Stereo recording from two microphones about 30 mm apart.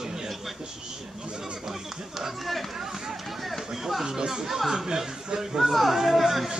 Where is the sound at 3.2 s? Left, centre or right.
Centre.